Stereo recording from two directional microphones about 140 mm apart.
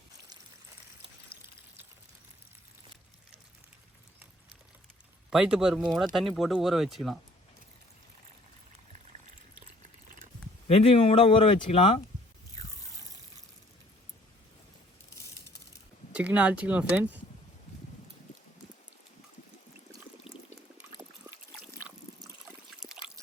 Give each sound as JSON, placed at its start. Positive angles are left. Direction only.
{"t": 5.3, "sound": "speech", "side_deg": -5}
{"t": 10.7, "sound": "speech", "side_deg": 45}
{"t": 16.1, "sound": "speech", "side_deg": -10}
{"t": 20.3, "sound": "boiling", "side_deg": -5}
{"t": 21.0, "sound": "water", "side_deg": -20}
{"t": 22.8, "sound": "trickle", "side_deg": -5}